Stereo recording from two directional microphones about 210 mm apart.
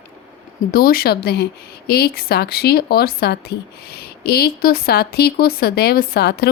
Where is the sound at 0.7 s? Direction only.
45° left (ahead or behind).